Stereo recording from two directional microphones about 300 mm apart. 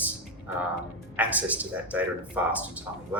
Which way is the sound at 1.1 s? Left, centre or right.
Centre.